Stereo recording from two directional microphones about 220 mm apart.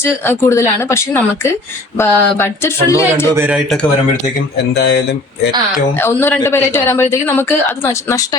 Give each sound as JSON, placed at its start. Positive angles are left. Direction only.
{"t": 0.3, "sound": "speech", "side_deg": 10}
{"t": 3.3, "sound": "a man's voice", "side_deg": -10}
{"t": 4.5, "sound": "speech", "side_deg": 50}
{"t": 6.0, "sound": "speech", "side_deg": 10}